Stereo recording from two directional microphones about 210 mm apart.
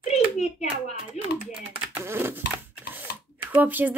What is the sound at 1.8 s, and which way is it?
Speech, 10° right (ahead or behind).